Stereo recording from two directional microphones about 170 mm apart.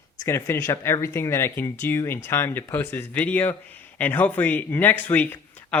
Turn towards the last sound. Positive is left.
turn(degrees=10)  # may be behind; listen again after turning